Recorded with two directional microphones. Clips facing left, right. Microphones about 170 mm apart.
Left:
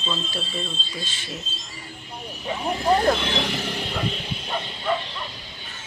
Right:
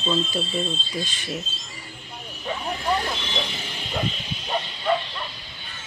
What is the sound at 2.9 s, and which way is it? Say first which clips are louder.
Speech: left 7 dB; 55° left (ahead or behind).